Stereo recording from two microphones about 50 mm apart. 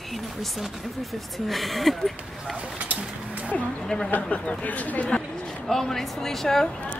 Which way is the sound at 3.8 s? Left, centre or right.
Centre.